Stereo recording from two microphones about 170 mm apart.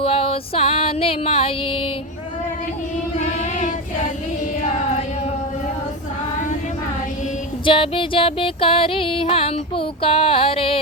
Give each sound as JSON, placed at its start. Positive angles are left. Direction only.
{"t": 0.0, "sound": "music", "side_deg": 35}
{"t": 7.6, "sound": "music", "side_deg": 30}